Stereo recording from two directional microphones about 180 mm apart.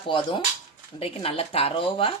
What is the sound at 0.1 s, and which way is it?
Speech, 25° left (ahead or behind).